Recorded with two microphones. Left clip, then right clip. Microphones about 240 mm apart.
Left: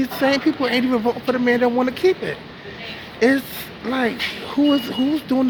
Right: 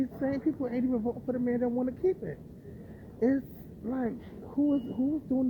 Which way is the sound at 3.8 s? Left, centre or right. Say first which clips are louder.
Left 13 dB; centre.